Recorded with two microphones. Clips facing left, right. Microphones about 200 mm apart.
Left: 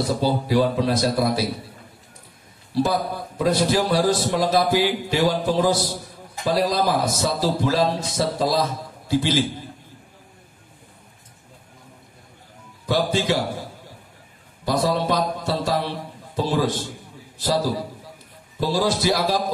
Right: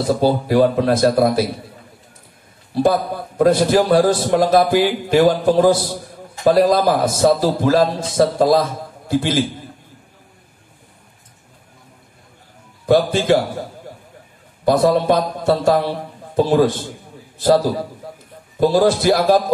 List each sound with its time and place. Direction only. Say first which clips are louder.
0.1 s a man's voice: right 7 dB; 50° right (ahead or behind)
2.7 s a man's voice: right 5 dB; 50° right (ahead or behind)
12.8 s a man's voice: right 7 dB; 50° right (ahead or behind)
14.6 s a man's voice: right 7 dB; 55° right (ahead or behind)
18.0 s a sound: right 8 dB; 50° right (ahead or behind)
18.6 s a man's voice: right 7 dB; 50° right (ahead or behind)